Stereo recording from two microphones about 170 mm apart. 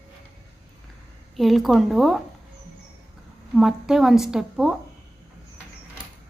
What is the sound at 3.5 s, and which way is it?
A woman's voice, centre (ahead or behind).